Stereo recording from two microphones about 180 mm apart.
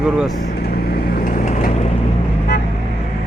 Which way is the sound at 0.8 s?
55° left (ahead or behind).